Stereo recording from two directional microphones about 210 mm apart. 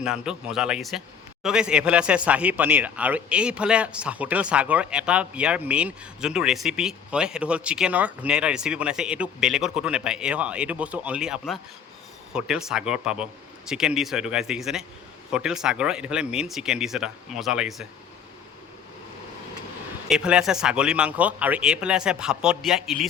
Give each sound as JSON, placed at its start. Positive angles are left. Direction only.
{"t": 0.0, "sound": "a man's voice", "side_deg": -5}
{"t": 20.1, "sound": "a man's voice", "side_deg": -5}